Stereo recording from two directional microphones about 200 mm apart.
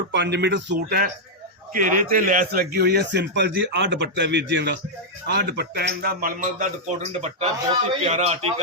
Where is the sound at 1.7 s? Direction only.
40° right (ahead or behind).